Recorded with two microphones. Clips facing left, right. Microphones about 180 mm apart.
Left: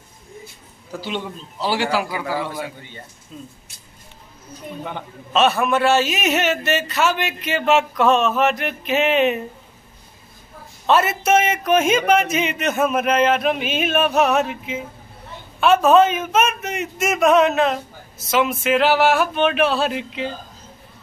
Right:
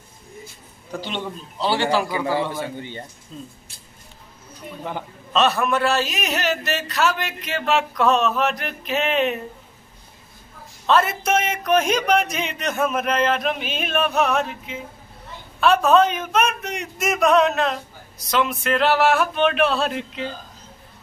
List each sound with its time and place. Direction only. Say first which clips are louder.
1.0 s a man's voice: left 3 dB; 10° left (ahead or behind)
2.8 s speech: right 6 dB; 30° right (ahead or behind)
3.3 s a man's voice: even; 5° left (ahead or behind)
4.8 s a man's voice: right 1 dB; centre (ahead or behind)
10.9 s a man's voice: left 2 dB; 5° left (ahead or behind)